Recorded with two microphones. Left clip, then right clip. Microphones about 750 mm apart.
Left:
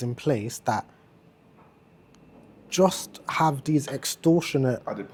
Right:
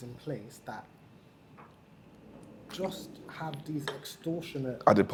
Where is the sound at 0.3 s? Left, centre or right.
Left.